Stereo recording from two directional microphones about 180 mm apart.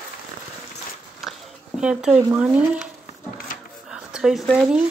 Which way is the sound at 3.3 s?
55° left (ahead or behind).